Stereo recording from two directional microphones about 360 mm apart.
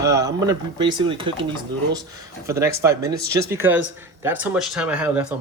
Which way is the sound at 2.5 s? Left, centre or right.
Centre.